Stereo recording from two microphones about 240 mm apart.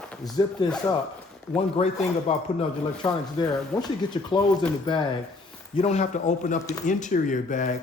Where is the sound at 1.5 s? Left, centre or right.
Left.